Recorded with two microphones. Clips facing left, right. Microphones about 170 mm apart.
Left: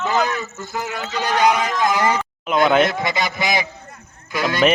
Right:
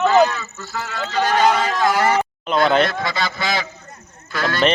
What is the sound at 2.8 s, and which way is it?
Speech, 20° left (ahead or behind).